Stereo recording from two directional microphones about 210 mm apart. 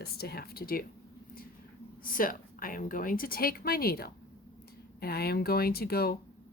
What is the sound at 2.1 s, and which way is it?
A woman's voice, 40° left (ahead or behind).